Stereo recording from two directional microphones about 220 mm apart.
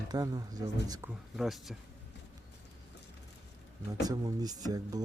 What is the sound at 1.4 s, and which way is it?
Speech, centre (ahead or behind).